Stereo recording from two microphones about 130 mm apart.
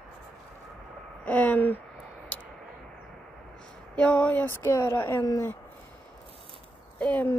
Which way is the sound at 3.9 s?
10° left (ahead or behind).